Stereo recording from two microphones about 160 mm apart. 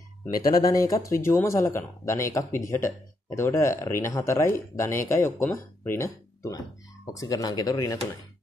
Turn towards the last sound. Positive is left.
turn(degrees=20)  # may be behind; listen again after turning